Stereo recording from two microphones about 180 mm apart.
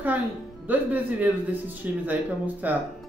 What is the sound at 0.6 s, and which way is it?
Speech, 10° right (ahead or behind).